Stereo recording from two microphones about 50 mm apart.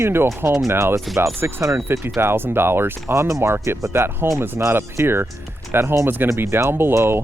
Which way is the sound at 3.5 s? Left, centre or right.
Right.